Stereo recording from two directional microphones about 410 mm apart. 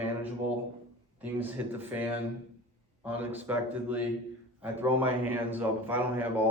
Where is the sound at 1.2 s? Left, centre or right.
Centre.